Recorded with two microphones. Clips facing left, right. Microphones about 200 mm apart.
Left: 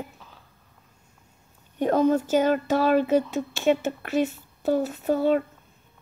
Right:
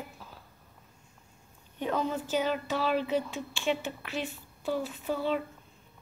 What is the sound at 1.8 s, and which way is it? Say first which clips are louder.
Speech: left 10 dB; 45° left (ahead or behind).